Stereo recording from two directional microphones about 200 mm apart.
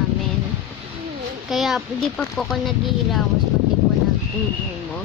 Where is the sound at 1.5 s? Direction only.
Centre (ahead or behind).